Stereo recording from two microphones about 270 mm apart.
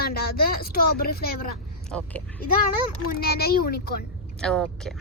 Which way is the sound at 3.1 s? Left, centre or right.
Left.